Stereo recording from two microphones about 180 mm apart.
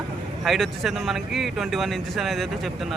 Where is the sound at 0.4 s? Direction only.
Centre (ahead or behind).